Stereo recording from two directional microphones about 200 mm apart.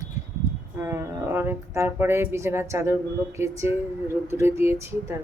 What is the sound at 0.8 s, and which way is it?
Speech, 10° right (ahead or behind).